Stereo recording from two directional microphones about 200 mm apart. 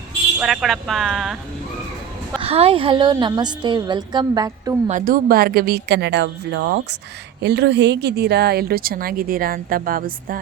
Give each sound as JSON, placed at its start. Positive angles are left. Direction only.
{"t": 0.3, "sound": "speech", "side_deg": 0}
{"t": 2.4, "sound": "a woman's voice", "side_deg": -30}
{"t": 4.9, "sound": "a woman's voice", "side_deg": -40}